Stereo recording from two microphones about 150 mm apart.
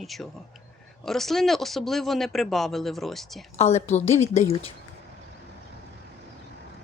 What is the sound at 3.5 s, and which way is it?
A woman's voice, 45° left (ahead or behind).